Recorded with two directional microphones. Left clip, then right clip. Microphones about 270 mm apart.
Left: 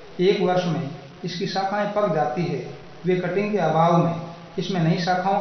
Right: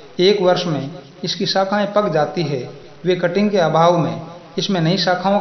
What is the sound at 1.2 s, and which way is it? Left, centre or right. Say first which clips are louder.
Speech: right 7 dB; right.